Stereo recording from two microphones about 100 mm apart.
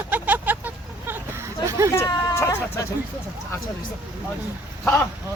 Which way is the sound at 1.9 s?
30° left (ahead or behind).